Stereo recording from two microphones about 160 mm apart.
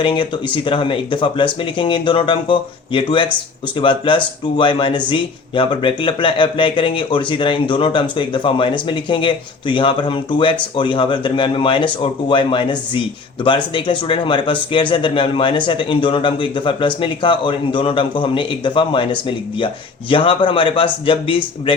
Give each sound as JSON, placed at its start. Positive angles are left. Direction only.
{"t": 0.0, "sound": "speech", "side_deg": 30}